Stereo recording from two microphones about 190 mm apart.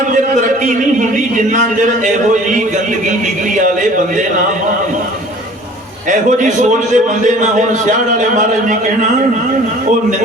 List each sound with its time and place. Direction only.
6.1 s a man's voice: 40° right (ahead or behind)